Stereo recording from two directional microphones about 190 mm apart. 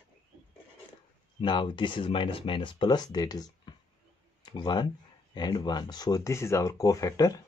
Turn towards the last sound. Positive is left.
turn(degrees=20)  # may be behind; listen again after turning